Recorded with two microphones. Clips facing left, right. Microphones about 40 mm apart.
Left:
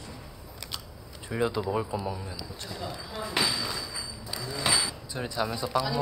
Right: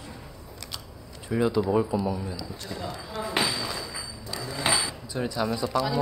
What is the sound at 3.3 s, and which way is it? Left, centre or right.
Speech, centre.